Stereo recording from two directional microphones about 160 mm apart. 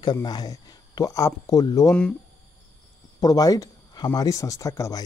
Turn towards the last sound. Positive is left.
turn(degrees=20)  # may be behind; listen again after turning